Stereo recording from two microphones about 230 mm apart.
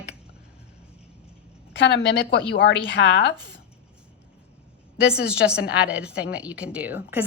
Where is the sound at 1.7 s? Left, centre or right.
Left.